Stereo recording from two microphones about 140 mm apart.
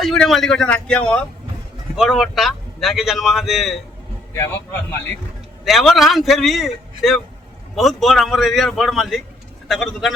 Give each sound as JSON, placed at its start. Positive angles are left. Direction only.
{"t": 0.0, "sound": "a man's voice", "side_deg": 0}
{"t": 4.4, "sound": "a man's voice", "side_deg": 15}
{"t": 5.6, "sound": "a man's voice", "side_deg": 0}